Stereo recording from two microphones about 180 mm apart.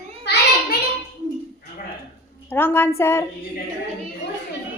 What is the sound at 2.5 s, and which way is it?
Speech, 10° left (ahead or behind).